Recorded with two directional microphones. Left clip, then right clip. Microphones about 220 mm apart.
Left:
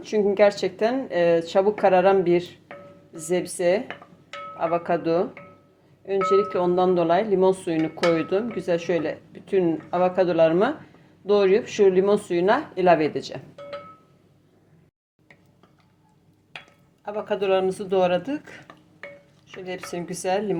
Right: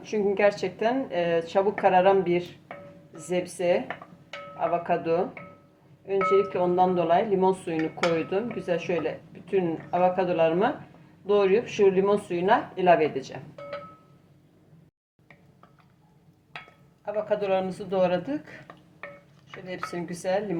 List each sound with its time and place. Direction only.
0.0 s speech: 40° left (ahead or behind)
17.1 s speech: 30° left (ahead or behind)
19.6 s speech: 30° left (ahead or behind)